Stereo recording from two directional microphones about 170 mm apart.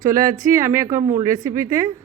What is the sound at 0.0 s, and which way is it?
Speech, 20° right (ahead or behind).